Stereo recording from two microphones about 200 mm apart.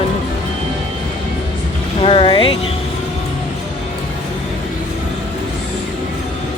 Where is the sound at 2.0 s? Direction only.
25° left (ahead or behind).